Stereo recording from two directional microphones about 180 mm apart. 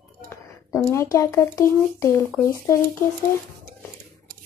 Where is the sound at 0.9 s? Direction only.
15° left (ahead or behind).